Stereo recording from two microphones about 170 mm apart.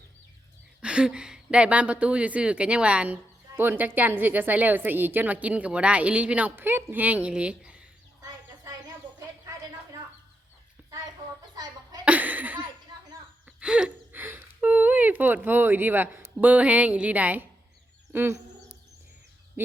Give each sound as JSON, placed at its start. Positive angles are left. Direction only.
{"t": 0.8, "sound": "a woman's voice", "side_deg": -5}
{"t": 11.5, "sound": "cough", "side_deg": -25}
{"t": 12.0, "sound": "chuckle", "side_deg": -10}
{"t": 13.6, "sound": "a woman's voice", "side_deg": -5}
{"t": 18.1, "sound": "a sound", "side_deg": -15}
{"t": 19.6, "sound": "a sound", "side_deg": -10}